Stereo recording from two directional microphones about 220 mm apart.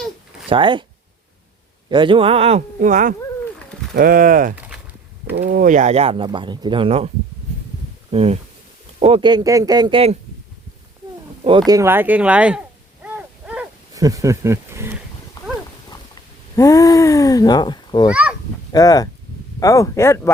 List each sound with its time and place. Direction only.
0.4 s speech: 20° right (ahead or behind)
1.9 s speech: 20° right (ahead or behind)
8.1 s speech: 25° right (ahead or behind)
11.4 s speech: 20° right (ahead or behind)
13.1 s wild animals: 5° right (ahead or behind)
16.6 s speech: 15° left (ahead or behind)
18.1 s speech: 5° right (ahead or behind)
18.7 s speech: 15° left (ahead or behind)